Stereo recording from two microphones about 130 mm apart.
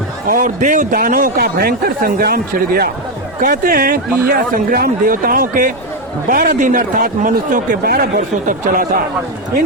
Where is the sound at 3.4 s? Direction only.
90° right.